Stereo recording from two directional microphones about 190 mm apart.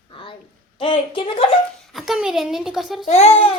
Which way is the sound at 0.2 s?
25° left (ahead or behind).